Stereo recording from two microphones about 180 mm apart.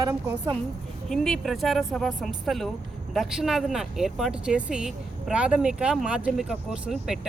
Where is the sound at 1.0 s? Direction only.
Centre (ahead or behind).